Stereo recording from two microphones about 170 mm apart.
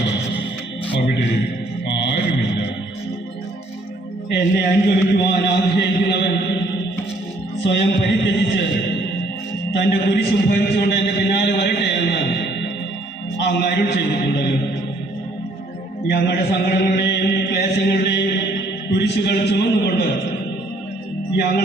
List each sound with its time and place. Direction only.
1.9 s mantra: 80° left
4.3 s a man's voice: 80° left
7.6 s a man's voice: 90° left
9.7 s a man's voice: 80° left
13.4 s a man's voice: 90° left
16.0 s mantra: 75° left (ahead or behind)
18.9 s a man's voice: 85° left